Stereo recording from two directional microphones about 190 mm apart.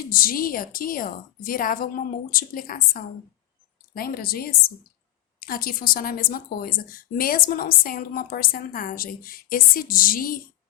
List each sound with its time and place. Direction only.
0.1 s a woman's voice: 50° left (ahead or behind)